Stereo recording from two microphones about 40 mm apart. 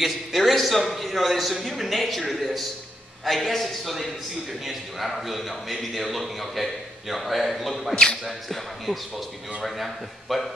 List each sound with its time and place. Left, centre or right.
0.0 s a man's voice: centre
7.9 s speech: centre
8.3 s a man's voice: centre